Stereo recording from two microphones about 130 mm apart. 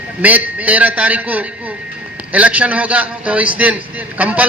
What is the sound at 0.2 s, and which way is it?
A man's voice, 10° right (ahead or behind).